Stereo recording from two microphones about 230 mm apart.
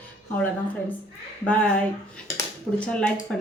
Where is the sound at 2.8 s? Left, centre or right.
Centre.